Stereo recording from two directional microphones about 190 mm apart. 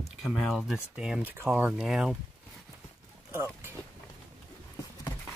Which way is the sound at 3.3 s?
10° right (ahead or behind).